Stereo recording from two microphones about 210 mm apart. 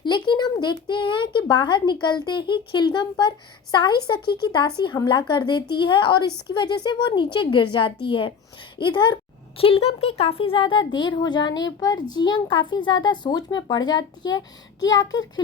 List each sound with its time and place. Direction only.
0.0 s a child's voice: 20° left (ahead or behind)